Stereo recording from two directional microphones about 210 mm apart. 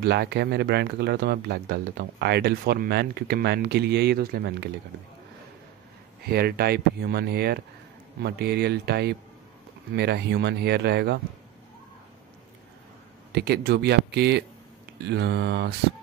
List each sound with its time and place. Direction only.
0.0 s speech: 50° right (ahead or behind)
6.2 s speech: 50° right (ahead or behind)
13.3 s speech: 50° right (ahead or behind)